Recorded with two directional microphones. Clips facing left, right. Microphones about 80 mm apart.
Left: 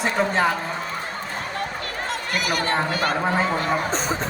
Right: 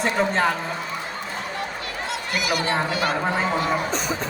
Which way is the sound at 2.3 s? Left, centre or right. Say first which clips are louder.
Even; left.